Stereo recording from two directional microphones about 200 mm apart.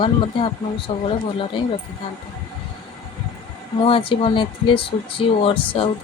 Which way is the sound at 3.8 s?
25° left (ahead or behind).